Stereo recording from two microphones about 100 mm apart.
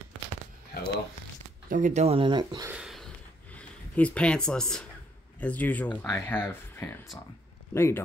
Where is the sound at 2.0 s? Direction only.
60° right (ahead or behind).